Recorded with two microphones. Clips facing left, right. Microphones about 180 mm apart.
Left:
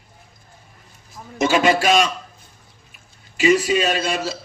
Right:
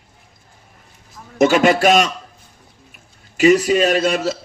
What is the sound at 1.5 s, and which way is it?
Speech, 45° right (ahead or behind).